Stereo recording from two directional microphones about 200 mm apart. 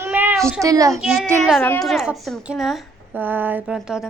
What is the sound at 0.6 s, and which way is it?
Speech, 15° right (ahead or behind).